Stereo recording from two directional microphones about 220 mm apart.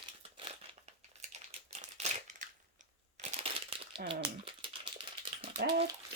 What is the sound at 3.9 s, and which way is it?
Crumpling, 25° right (ahead or behind).